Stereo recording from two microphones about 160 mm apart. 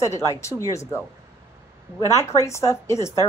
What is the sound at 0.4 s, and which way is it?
Speech, 20° left (ahead or behind).